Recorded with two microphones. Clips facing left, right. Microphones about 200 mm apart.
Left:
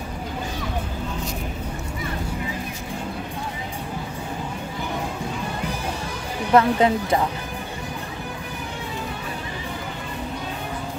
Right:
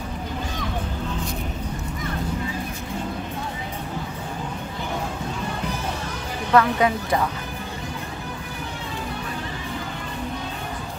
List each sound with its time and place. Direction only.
6.5 s speech: 25° left (ahead or behind)